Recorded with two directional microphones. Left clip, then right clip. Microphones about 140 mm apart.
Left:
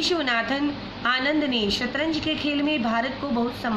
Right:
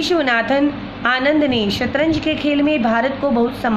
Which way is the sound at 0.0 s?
50° right (ahead or behind).